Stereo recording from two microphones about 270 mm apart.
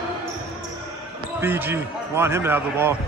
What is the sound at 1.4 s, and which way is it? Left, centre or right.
A man's voice, centre.